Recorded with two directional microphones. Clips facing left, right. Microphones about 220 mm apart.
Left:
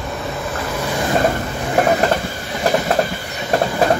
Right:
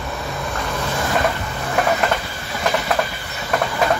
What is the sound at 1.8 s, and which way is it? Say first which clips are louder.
Vehicle: left 4 dB; 40° left (ahead or behind).